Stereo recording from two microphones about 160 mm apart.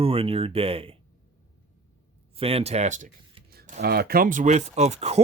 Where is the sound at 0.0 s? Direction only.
35° right (ahead or behind).